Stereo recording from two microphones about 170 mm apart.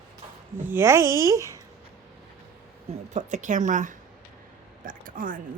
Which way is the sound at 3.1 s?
45° right (ahead or behind).